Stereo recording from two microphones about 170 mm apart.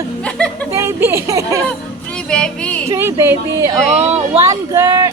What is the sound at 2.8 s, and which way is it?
Speech, 15° right (ahead or behind).